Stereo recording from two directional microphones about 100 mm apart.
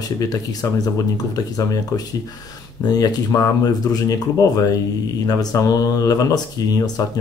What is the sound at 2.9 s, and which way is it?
Speech, 40° left (ahead or behind).